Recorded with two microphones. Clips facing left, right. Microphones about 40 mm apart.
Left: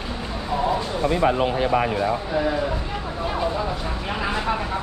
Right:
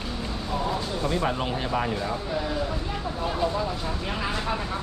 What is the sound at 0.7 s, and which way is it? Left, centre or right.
Speech, centre.